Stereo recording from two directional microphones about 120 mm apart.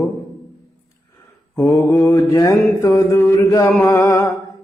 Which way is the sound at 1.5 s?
25° left (ahead or behind).